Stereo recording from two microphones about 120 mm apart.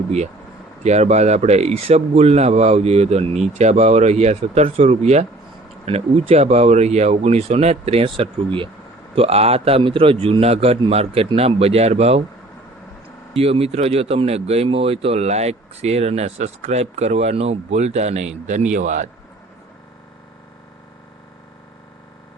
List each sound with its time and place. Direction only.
0.9 s speech: 65° right (ahead or behind); by 8.7 s 45° right (ahead or behind)
9.1 s speech: 55° right (ahead or behind)
13.3 s a man's voice: 55° right (ahead or behind); by 19.1 s 85° right